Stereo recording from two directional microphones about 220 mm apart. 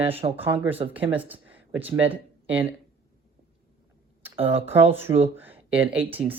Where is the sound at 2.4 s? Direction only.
10° right (ahead or behind).